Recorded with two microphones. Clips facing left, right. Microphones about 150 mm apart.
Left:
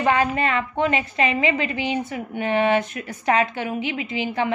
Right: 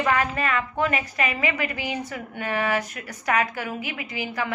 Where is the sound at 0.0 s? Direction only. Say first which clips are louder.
Left 3 dB; 25° left (ahead or behind).